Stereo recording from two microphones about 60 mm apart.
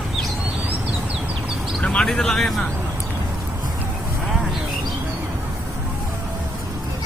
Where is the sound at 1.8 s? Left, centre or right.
Centre.